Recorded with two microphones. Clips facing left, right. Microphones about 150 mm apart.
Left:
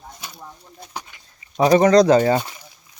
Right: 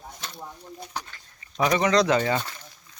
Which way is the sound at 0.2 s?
10° left (ahead or behind).